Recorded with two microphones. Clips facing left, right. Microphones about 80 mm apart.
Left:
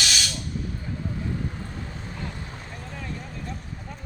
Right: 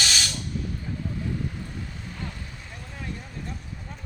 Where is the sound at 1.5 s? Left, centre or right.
Left.